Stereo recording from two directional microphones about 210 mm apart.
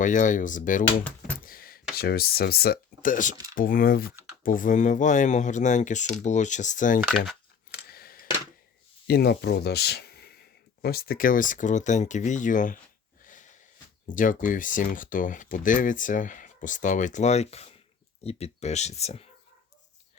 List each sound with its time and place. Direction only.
0.0 s speech: 35° left (ahead or behind)
1.5 s a sound: 45° left (ahead or behind)
2.0 s speech: 45° left (ahead or behind)
7.9 s scissors: 45° left (ahead or behind)
9.0 s speech: 50° left (ahead or behind)
13.2 s wheeze: 40° left (ahead or behind)
14.1 s speech: 40° left (ahead or behind)